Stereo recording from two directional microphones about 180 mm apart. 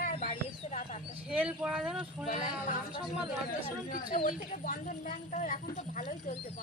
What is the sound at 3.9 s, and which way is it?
Speech, 45° left (ahead or behind).